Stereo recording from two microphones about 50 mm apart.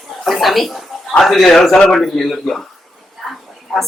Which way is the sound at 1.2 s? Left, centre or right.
Centre.